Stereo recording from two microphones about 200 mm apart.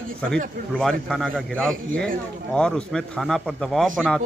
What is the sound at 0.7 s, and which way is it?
A man's voice, 5° left (ahead or behind).